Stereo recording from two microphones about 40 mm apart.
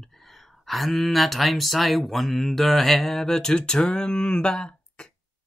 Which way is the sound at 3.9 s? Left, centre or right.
Left.